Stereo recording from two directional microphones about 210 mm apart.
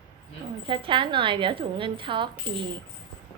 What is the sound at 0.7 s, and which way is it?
A woman's voice, 25° right (ahead or behind).